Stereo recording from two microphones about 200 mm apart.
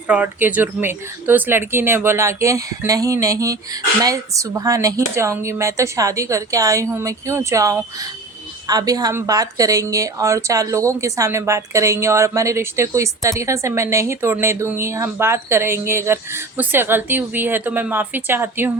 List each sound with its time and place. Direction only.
0.1 s speech: 10° right (ahead or behind)